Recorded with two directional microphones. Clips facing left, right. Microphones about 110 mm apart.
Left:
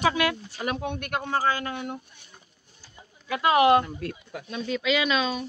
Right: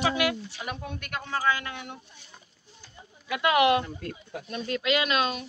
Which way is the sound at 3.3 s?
35° left (ahead or behind).